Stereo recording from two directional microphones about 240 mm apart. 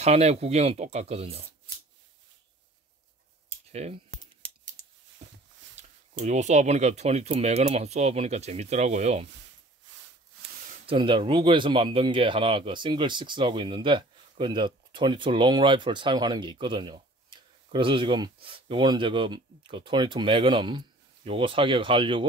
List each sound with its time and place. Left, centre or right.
0.0 s speech: right
3.7 s speech: right
5.8 s speech: right
10.9 s speech: right